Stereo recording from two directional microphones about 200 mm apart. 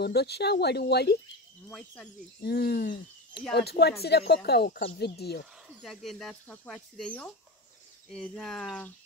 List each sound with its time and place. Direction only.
0.0 s speech: 55° left (ahead or behind)
1.7 s speech: 5° left (ahead or behind)
2.4 s speech: 50° left (ahead or behind)
5.8 s speech: centre (ahead or behind)